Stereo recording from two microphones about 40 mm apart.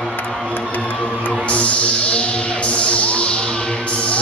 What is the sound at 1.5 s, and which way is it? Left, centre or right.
Music, left.